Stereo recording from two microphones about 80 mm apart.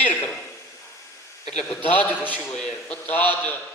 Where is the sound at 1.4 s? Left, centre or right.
Left.